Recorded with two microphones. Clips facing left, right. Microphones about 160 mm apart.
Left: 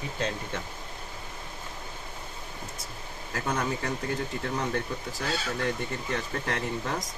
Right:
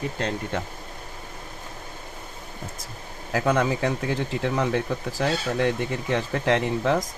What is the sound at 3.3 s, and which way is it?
Speech, 90° right.